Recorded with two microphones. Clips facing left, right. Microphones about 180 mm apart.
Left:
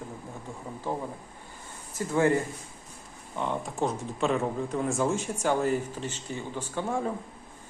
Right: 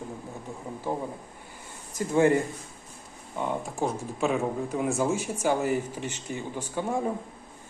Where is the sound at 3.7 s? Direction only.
Centre (ahead or behind).